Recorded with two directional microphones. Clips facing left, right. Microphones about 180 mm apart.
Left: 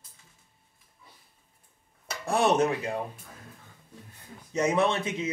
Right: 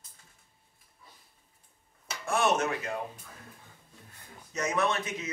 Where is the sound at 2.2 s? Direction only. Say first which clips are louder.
Left 4 dB; 35° left (ahead or behind).